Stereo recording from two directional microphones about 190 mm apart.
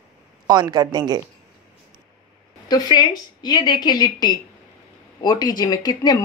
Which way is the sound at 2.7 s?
20° left (ahead or behind).